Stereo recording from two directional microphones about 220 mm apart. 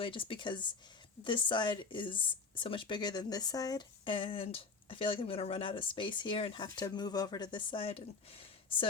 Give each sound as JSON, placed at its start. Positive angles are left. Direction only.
{"t": 0.0, "sound": "speech", "side_deg": 25}